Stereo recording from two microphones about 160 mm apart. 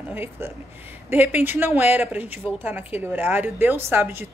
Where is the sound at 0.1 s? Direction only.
15° right (ahead or behind).